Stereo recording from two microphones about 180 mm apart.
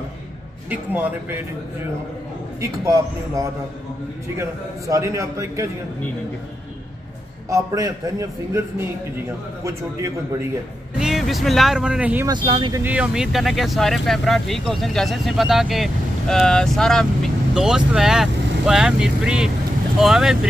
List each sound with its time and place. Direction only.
0.7 s a man's voice: 10° right (ahead or behind)
2.6 s a man's voice: 15° right (ahead or behind)
7.4 s a man's voice: 20° right (ahead or behind)
11.0 s speech: centre (ahead or behind)
12.3 s speech: 25° right (ahead or behind)
12.7 s speech: 10° right (ahead or behind)